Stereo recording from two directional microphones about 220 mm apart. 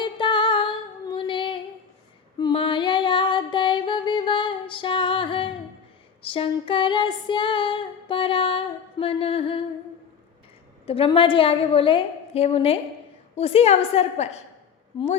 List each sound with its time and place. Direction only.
0.0 s female singing: 20° left (ahead or behind)
2.4 s music: 25° left (ahead or behind)
6.2 s female singing: 25° left (ahead or behind)
10.8 s a woman's voice: 25° left (ahead or behind)